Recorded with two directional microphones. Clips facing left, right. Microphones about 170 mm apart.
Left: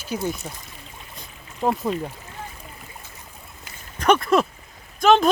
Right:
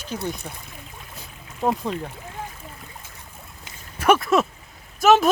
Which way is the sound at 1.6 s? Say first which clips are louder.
Left 1 dB; 10° left (ahead or behind).